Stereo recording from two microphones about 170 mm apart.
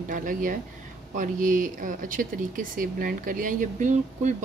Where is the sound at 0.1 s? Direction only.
50° right (ahead or behind).